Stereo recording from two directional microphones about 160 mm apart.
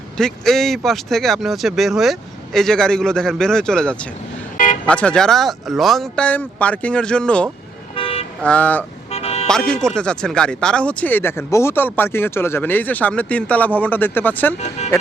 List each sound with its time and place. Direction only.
0.2 s speech: 5° left (ahead or behind)
4.5 s vehicle: 55° left (ahead or behind)
4.9 s speech: 5° left (ahead or behind)
7.9 s toot: 35° left (ahead or behind)
8.4 s speech: 10° left (ahead or behind)
9.0 s vehicle: 40° left (ahead or behind)
9.5 s speech: 5° left (ahead or behind)